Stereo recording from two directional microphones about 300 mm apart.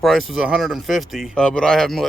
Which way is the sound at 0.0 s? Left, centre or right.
Centre.